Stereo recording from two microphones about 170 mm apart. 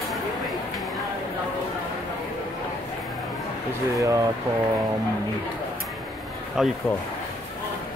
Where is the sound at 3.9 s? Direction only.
20° right (ahead or behind).